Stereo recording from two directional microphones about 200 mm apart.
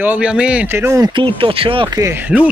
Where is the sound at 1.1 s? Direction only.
25° right (ahead or behind).